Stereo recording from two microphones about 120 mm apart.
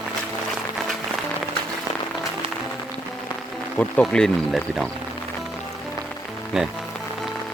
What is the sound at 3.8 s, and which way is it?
Speech, 10° left (ahead or behind).